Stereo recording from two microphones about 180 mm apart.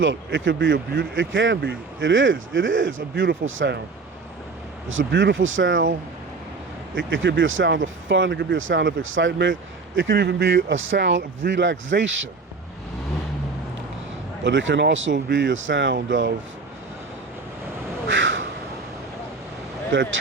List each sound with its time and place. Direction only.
0.0 s speech: 90° right
4.9 s speech: 90° right
6.9 s speech: 90° right
14.4 s speech: 85° right
18.1 s crow: 90° right
19.9 s speech: 90° right